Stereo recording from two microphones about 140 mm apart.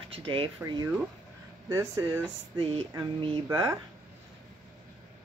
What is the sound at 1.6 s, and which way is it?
Speech, 25° right (ahead or behind).